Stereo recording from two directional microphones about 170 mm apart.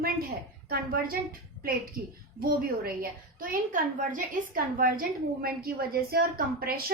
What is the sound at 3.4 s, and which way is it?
Speech, 55° right (ahead or behind).